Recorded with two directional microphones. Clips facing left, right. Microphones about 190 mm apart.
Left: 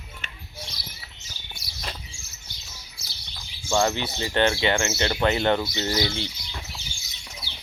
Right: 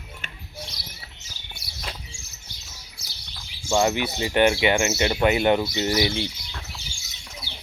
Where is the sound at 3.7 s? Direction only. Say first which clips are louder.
Right 2 dB; 20° right (ahead or behind).